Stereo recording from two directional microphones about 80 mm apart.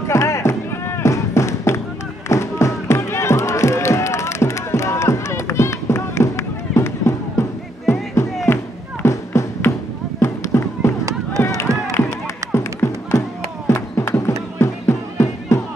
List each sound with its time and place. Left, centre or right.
0.0 s music: left
9.0 s a sound: left
11.3 s run: left
12.5 s music: left
13.7 s a sound: left
14.6 s music: left